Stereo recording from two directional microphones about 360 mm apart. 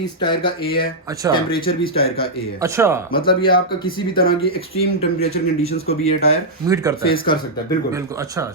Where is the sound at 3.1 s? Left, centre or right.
Left.